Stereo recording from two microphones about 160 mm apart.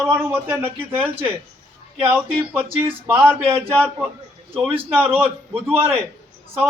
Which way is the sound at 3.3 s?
15° right (ahead or behind).